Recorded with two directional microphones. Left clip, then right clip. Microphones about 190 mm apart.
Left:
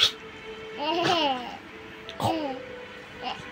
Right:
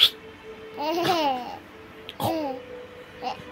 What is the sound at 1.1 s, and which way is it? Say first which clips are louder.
Babbling: right 1 dB; 35° right (ahead or behind).